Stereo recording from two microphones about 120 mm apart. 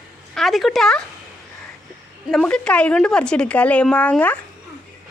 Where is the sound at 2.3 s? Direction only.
5° left (ahead or behind).